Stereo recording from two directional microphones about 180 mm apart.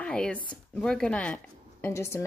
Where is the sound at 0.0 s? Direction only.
5° left (ahead or behind).